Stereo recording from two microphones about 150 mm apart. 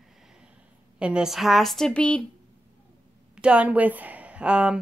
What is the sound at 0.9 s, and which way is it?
A woman's voice, 5° right (ahead or behind).